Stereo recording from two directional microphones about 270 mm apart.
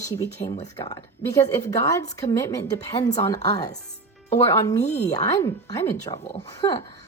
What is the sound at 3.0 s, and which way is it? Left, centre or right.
Speech, left.